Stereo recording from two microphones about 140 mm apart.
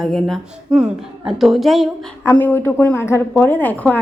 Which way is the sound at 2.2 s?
15° left (ahead or behind).